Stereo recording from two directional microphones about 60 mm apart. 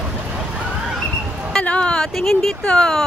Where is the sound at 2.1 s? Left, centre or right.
Centre.